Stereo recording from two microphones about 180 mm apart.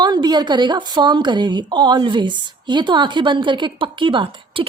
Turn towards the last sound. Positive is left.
turn(degrees=-30)  # may be behind; listen again after turning